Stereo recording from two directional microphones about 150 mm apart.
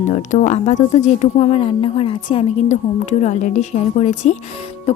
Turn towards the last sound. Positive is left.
turn(degrees=50)  # may be behind; listen again after turning